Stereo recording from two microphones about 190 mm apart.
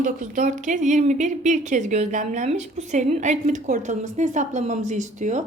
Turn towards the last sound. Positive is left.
turn(degrees=-40)  # may be behind; listen again after turning